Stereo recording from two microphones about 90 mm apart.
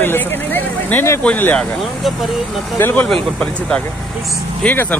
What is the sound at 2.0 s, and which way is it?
Speech, centre (ahead or behind).